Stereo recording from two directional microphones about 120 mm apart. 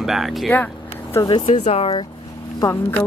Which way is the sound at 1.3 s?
45° left (ahead or behind).